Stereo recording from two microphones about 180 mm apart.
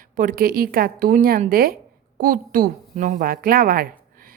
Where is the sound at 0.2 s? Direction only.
50° right (ahead or behind).